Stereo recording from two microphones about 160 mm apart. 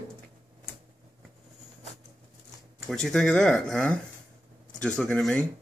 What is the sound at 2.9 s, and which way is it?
Speech, 5° left (ahead or behind).